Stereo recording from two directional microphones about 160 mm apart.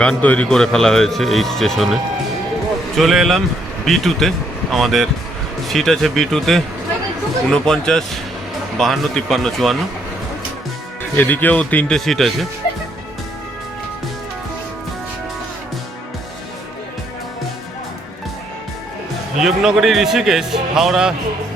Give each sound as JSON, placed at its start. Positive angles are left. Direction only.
{"t": 0.0, "sound": "a man's voice", "side_deg": 10}
{"t": 3.0, "sound": "a man's voice", "side_deg": 0}
{"t": 11.2, "sound": "speech", "side_deg": 10}
{"t": 19.4, "sound": "a man's voice", "side_deg": 0}